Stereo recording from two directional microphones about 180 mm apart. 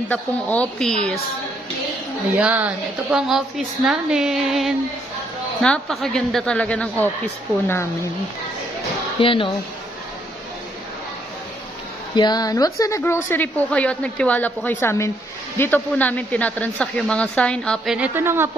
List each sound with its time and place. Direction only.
0.1 s a woman's voice: 5° left (ahead or behind)
2.3 s a woman's voice: 10° right (ahead or behind); by 7.9 s 15° left (ahead or behind)
9.2 s speech: 30° left (ahead or behind)
12.2 s a woman's voice: 20° left (ahead or behind); by 17.9 s 5° left (ahead or behind)
17.9 s a woman's voice: 10° right (ahead or behind)